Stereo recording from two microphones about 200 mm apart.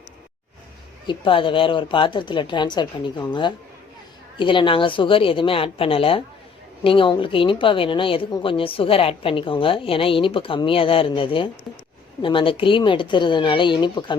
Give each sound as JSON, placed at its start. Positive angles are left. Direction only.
{"t": 1.0, "sound": "a woman's voice", "side_deg": 25}